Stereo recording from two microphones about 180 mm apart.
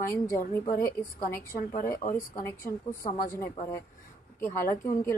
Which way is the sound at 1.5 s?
45° left (ahead or behind).